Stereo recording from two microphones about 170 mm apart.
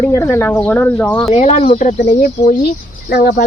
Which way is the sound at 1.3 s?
40° left (ahead or behind).